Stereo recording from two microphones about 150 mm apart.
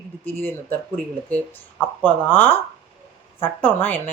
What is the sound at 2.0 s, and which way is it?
Speech, 10° left (ahead or behind).